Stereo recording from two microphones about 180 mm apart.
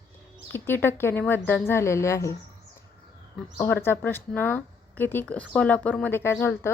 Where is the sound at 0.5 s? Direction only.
10° left (ahead or behind).